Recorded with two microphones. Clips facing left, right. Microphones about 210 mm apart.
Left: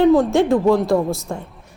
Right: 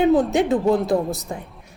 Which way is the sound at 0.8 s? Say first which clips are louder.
Left 3 dB; 20° right (ahead or behind).